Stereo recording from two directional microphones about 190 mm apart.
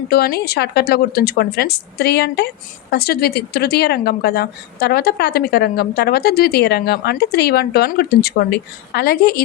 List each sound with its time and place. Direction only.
0.1 s a woman's voice: 55° left (ahead or behind)